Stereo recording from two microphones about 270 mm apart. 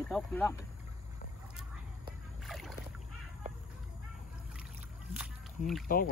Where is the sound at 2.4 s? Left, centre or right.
Centre.